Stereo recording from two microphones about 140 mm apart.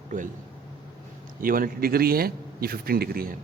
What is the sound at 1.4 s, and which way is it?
A man's voice, 90° right.